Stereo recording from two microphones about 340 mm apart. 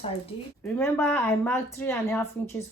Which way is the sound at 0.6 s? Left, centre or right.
Centre.